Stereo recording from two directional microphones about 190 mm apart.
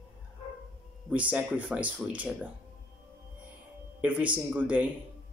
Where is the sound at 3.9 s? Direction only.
10° right (ahead or behind).